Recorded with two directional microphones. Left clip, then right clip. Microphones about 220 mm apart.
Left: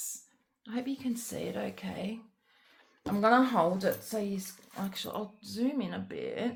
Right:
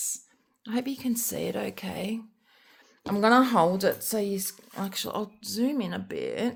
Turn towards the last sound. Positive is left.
turn(degrees=-50)  # may be behind; listen again after turning